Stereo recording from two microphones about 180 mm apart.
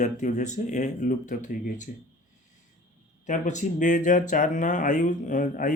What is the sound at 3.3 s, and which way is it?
Speech, 45° left (ahead or behind).